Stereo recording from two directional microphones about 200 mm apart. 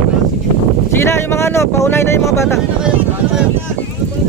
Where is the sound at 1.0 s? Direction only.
10° left (ahead or behind).